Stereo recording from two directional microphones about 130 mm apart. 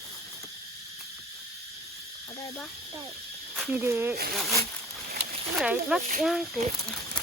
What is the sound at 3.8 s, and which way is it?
Speech, 15° right (ahead or behind).